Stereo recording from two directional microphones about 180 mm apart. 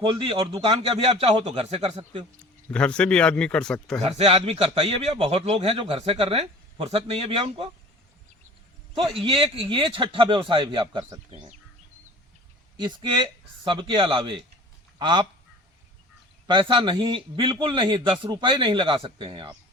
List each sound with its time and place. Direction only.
0.0 s a man's voice: 30° right (ahead or behind)
2.6 s speech: 5° left (ahead or behind)
4.0 s a man's voice: 35° right (ahead or behind)
9.0 s a man's voice: 30° right (ahead or behind)
12.8 s a man's voice: 25° right (ahead or behind)
16.5 s a man's voice: 25° right (ahead or behind)